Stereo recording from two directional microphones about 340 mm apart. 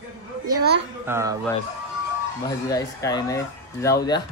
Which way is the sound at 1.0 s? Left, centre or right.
Centre.